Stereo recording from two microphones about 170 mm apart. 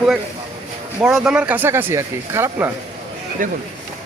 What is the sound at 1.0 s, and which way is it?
A man's voice, 5° right (ahead or behind).